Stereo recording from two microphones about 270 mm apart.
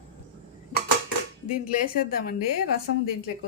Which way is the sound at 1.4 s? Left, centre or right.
Left.